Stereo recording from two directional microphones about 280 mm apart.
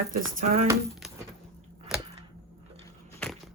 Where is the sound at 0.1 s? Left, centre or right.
Right.